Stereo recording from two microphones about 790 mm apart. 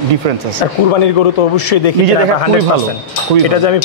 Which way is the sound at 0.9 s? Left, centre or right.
Left.